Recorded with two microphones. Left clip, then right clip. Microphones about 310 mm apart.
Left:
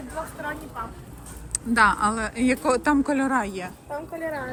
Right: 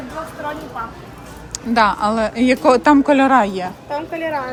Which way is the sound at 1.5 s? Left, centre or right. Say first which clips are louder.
Right 4 dB; centre.